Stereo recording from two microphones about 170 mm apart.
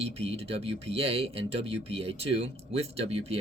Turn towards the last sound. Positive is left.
turn(degrees=-35)  # may be behind; listen again after turning